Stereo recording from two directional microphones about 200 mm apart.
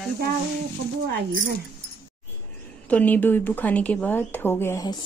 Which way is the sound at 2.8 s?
5° left (ahead or behind).